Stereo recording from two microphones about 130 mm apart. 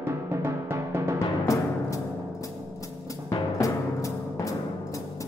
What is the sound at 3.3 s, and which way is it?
Music, 25° left (ahead or behind).